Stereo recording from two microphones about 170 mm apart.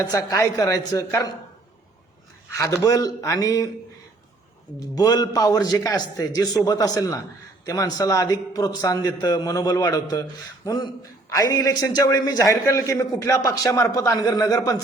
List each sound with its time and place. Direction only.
0.0 s a man's voice: 20° left (ahead or behind)
2.5 s a man's voice: 20° left (ahead or behind)
4.9 s a man's voice: 20° left (ahead or behind)